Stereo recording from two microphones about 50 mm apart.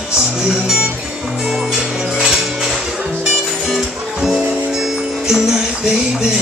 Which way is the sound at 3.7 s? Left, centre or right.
Centre.